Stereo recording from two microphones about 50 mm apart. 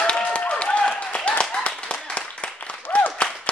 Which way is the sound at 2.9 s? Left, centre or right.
Left.